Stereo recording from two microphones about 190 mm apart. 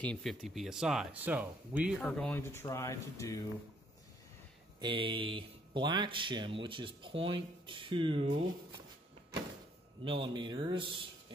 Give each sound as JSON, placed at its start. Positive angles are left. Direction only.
{"t": 0.0, "sound": "speech", "side_deg": 5}
{"t": 2.0, "sound": "speech", "side_deg": 5}
{"t": 4.7, "sound": "speech", "side_deg": -25}
{"t": 10.0, "sound": "speech", "side_deg": -25}